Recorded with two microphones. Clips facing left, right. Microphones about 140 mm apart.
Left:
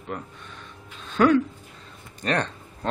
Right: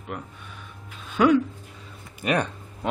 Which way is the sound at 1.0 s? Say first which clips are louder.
Even; 10° right (ahead or behind).